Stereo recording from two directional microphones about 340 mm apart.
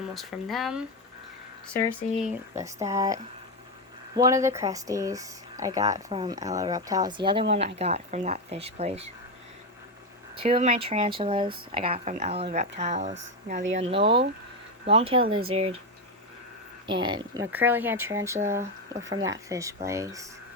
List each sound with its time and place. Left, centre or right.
0.1 s speech: centre
2.6 s speech: centre
10.3 s speech: centre
16.8 s speech: centre